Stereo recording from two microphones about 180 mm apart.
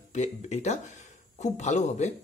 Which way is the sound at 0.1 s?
40° left (ahead or behind).